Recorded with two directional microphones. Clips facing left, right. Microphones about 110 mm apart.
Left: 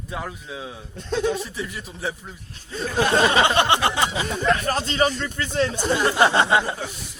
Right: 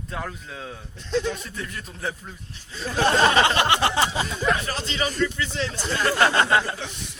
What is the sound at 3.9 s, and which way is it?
Speech, 35° right (ahead or behind).